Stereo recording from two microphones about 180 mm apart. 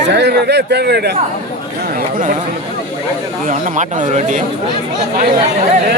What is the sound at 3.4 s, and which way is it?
Speech, 50° right (ahead or behind).